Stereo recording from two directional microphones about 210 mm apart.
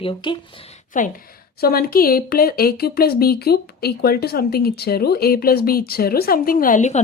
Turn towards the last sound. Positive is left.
turn(degrees=35)  # may be behind; listen again after turning